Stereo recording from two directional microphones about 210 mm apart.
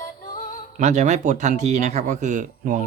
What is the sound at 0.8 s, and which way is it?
Speech, 35° right (ahead or behind).